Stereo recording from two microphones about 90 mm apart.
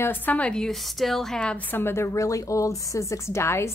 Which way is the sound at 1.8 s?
25° left (ahead or behind).